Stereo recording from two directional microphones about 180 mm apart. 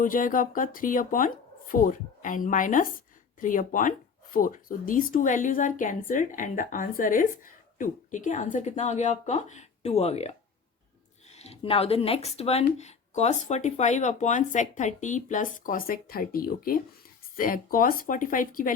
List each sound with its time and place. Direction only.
0.0 s speech: 50° left (ahead or behind)